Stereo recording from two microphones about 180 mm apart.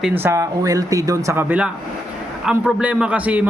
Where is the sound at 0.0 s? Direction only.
10° right (ahead or behind).